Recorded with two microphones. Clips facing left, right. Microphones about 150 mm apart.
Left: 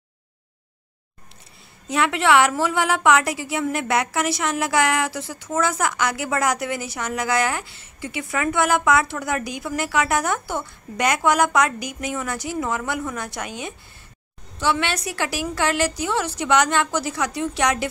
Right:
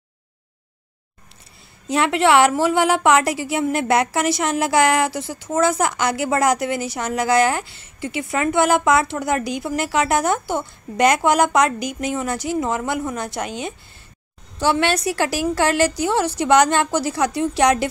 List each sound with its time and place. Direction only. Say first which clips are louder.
1.9 s a woman's voice: right 3 dB; 30° right (ahead or behind)
14.6 s a woman's voice: right 4 dB; 40° right (ahead or behind)